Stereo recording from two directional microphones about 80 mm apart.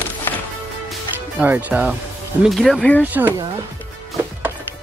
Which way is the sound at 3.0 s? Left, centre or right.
Right.